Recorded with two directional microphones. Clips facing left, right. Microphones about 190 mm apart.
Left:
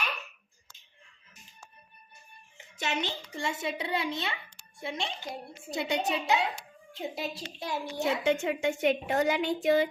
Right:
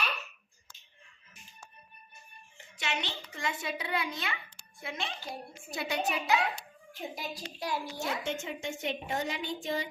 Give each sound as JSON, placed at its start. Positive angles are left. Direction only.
{"t": 2.7, "sound": "a woman's voice", "side_deg": 40}
{"t": 3.4, "sound": "a child's voice", "side_deg": 25}
{"t": 8.2, "sound": "a woman's voice", "side_deg": 65}